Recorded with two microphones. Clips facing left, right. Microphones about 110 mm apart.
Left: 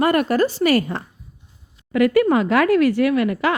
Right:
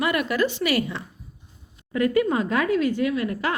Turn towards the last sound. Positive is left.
turn(degrees=90)